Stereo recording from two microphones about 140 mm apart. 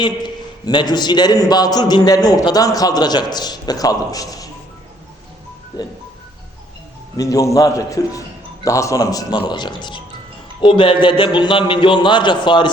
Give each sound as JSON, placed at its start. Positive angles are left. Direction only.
{"t": 0.0, "sound": "a man's voice", "side_deg": 30}
{"t": 5.7, "sound": "a man's voice", "side_deg": 30}
{"t": 7.2, "sound": "a man's voice", "side_deg": 25}